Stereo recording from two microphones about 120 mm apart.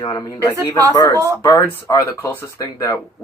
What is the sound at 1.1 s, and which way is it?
Speech, 25° right (ahead or behind).